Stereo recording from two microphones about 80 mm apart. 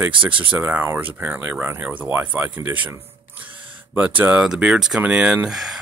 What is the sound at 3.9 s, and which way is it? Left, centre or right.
Speech, centre.